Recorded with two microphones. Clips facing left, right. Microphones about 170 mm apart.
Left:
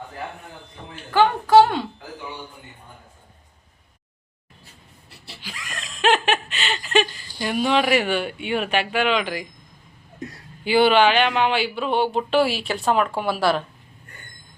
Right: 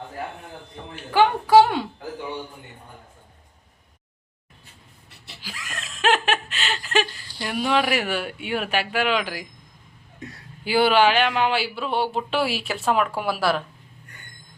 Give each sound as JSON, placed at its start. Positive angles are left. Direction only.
{"t": 1.1, "sound": "a sound", "side_deg": -10}
{"t": 5.4, "sound": "laughter", "side_deg": -5}
{"t": 7.4, "sound": "speech", "side_deg": 0}
{"t": 10.6, "sound": "speech", "side_deg": -5}